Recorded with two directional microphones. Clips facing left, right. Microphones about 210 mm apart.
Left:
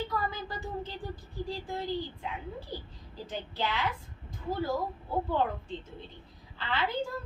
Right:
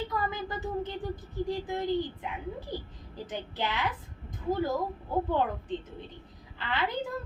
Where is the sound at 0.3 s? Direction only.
20° right (ahead or behind).